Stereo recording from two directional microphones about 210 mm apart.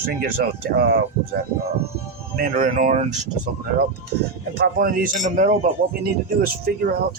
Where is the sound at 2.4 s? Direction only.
40° right (ahead or behind).